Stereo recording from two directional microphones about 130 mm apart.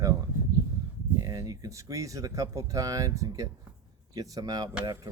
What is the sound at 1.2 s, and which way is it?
Speech, 30° right (ahead or behind).